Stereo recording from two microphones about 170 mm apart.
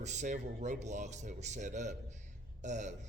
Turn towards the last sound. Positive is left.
turn(degrees=-45)  # may be behind; listen again after turning